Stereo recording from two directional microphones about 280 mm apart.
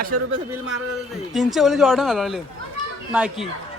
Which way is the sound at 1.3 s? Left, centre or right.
Centre.